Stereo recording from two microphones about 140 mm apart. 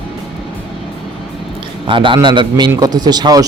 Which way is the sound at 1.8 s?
35° right (ahead or behind).